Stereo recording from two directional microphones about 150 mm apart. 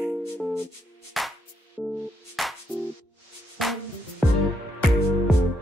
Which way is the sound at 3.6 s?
Centre (ahead or behind).